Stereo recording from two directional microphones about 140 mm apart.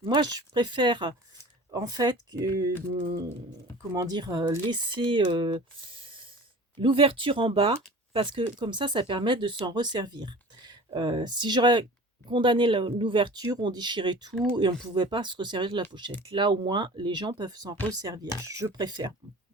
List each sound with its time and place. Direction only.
0.0 s speech: 30° right (ahead or behind)
3.9 s speech: 30° right (ahead or behind)